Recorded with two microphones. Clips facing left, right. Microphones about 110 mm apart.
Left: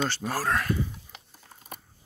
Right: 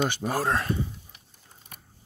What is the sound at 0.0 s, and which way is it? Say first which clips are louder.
Speech: right 2 dB; 15° right (ahead or behind).